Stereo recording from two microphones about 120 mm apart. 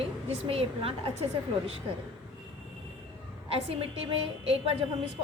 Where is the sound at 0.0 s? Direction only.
55° right (ahead or behind).